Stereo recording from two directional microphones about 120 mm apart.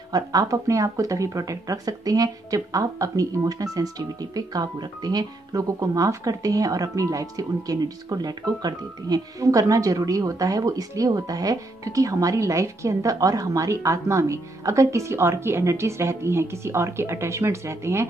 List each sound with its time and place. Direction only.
0.1 s speech: 30° right (ahead or behind)